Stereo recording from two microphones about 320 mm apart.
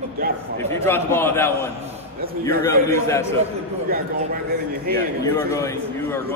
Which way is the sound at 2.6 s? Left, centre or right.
Centre.